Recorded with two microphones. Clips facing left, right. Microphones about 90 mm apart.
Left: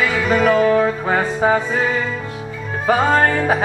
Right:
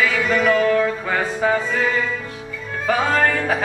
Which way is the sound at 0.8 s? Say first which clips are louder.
Left 3 dB; 25° left (ahead or behind).